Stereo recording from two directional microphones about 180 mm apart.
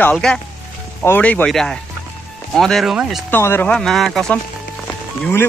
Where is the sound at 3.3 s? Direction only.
10° left (ahead or behind).